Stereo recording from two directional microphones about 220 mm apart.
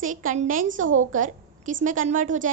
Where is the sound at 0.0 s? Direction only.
35° right (ahead or behind).